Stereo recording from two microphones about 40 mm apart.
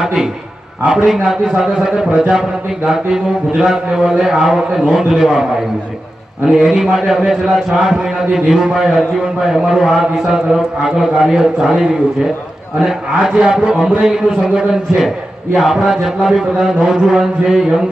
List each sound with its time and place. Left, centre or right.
0.0 s a man's voice: centre
6.4 s a man's voice: centre
15.5 s a man's voice: centre